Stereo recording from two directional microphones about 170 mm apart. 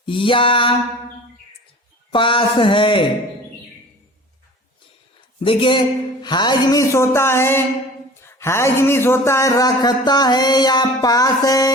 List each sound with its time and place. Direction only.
0.0 s a sound: 30° left (ahead or behind)
2.1 s speech: 30° left (ahead or behind)
5.4 s speech: 30° left (ahead or behind)